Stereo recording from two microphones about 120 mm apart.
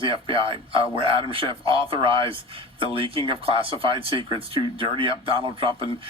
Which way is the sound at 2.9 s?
50° right (ahead or behind).